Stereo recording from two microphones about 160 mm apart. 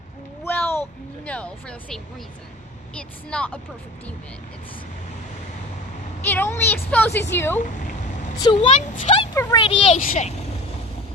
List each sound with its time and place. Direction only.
0.4 s a sound: 15° left (ahead or behind)
1.2 s speech: 10° left (ahead or behind)
3.0 s speech: 5° left (ahead or behind)
6.2 s speech: 15° left (ahead or behind)
8.5 s speech: 40° left (ahead or behind)
9.3 s speech: 20° left (ahead or behind)
9.6 s speech: 35° left (ahead or behind)
10.0 s speech: 50° left (ahead or behind)